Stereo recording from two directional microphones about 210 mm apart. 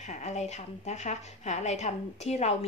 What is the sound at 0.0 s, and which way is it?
A woman's voice, 35° left (ahead or behind).